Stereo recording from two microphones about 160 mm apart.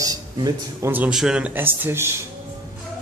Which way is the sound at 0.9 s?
5° right (ahead or behind).